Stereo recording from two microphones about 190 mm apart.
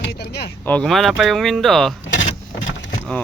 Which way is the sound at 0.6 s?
5° left (ahead or behind).